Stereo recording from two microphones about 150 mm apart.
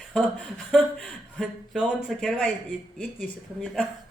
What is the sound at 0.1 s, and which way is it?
A woman's voice, 5° left (ahead or behind).